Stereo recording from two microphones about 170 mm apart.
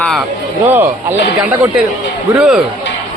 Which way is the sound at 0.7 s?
10° right (ahead or behind).